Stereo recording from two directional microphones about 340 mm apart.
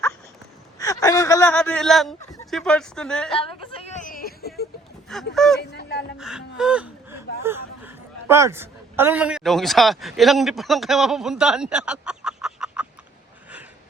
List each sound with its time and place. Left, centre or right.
0.8 s a man's voice: centre
3.3 s music: centre
5.3 s speech: centre
5.5 s a sound: left
6.1 s gasp: centre
7.4 s a woman's voice: centre